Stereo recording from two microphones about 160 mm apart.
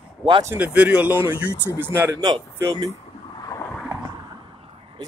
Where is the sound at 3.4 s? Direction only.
25° left (ahead or behind).